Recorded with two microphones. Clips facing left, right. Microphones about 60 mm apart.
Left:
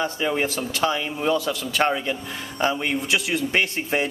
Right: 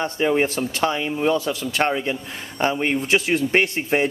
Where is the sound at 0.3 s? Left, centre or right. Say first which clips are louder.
Right 4 dB; right.